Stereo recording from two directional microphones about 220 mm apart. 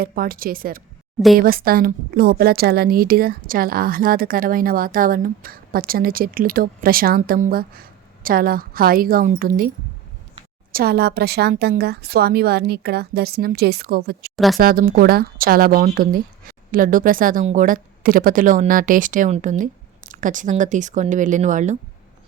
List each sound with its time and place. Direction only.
0.0 s a woman's voice: 40° right (ahead or behind)
14.3 s speech: centre (ahead or behind)
14.6 s a woman's voice: 40° right (ahead or behind)